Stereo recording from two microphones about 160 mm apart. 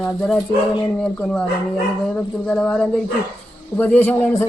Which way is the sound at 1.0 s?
5° left (ahead or behind).